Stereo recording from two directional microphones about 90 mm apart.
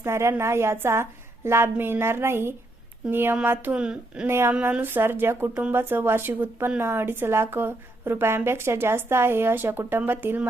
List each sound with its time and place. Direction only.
0.0 s a woman's voice: 30° right (ahead or behind); by 4.3 s 10° right (ahead or behind)
4.3 s a woman's voice: 30° right (ahead or behind)